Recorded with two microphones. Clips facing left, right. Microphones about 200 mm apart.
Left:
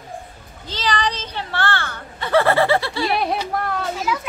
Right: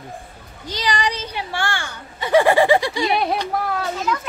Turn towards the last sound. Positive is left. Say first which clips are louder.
# even
turn(degrees=0)  # may be behind; listen again after turning